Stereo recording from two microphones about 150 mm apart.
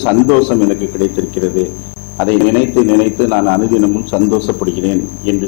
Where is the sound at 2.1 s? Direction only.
15° left (ahead or behind).